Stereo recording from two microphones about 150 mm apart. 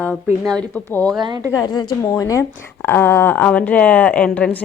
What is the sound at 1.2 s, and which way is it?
Speech, 30° right (ahead or behind).